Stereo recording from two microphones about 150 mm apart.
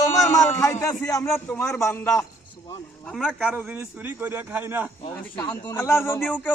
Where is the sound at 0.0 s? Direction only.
20° left (ahead or behind).